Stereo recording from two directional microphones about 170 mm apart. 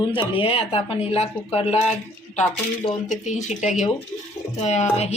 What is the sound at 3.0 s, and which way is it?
A woman's voice, 45° left (ahead or behind).